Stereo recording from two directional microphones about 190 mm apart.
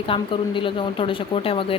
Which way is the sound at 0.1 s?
25° left (ahead or behind).